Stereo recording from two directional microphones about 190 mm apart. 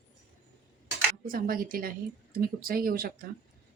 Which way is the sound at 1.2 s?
50° right (ahead or behind).